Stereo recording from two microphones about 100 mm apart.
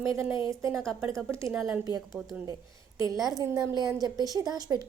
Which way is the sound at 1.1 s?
30° right (ahead or behind).